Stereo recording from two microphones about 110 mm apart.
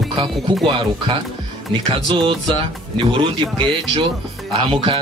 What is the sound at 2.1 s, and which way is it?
Speech, 50° right (ahead or behind).